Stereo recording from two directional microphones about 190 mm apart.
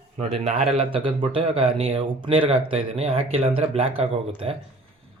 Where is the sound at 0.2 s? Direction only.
30° right (ahead or behind).